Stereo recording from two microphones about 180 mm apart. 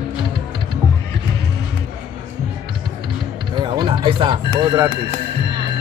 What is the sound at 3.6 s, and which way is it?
Speech, 25° right (ahead or behind).